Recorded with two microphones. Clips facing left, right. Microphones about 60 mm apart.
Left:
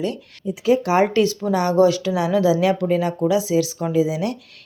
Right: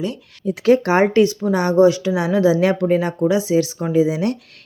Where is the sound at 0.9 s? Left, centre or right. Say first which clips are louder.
Right 3 dB; right.